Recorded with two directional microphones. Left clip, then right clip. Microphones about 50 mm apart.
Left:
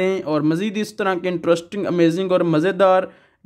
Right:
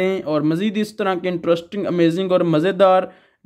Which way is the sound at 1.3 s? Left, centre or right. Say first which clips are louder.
Even; left.